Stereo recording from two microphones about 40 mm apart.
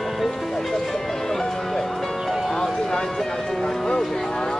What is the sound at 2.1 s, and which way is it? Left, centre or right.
Music, centre.